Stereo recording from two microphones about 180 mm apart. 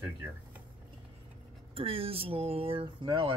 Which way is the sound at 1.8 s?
30° right (ahead or behind).